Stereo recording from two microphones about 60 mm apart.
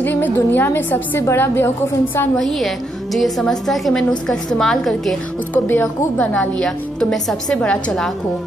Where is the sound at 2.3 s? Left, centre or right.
Centre.